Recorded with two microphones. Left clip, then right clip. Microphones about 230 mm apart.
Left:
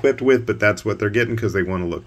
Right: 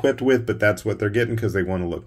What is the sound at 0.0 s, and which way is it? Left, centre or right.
Speech, centre.